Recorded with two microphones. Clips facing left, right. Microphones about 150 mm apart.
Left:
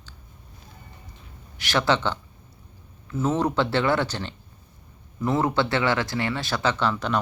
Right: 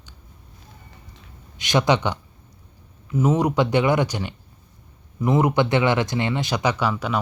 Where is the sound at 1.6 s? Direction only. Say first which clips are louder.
Right 3 dB; 20° right (ahead or behind).